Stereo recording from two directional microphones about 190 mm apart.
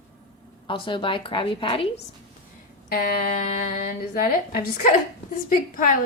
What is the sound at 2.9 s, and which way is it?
A woman's voice, 50° left (ahead or behind).